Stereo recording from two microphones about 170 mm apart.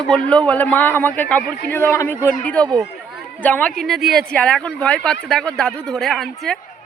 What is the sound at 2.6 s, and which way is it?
Speech, 25° right (ahead or behind).